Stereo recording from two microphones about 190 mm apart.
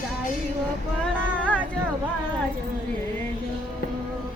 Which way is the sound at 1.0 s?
5° left (ahead or behind).